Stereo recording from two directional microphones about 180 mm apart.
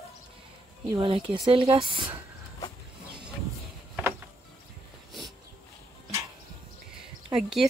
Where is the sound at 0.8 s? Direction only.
30° right (ahead or behind).